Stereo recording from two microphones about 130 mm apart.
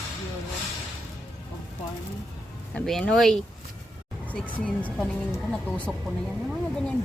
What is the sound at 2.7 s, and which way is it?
Speech, 5° left (ahead or behind).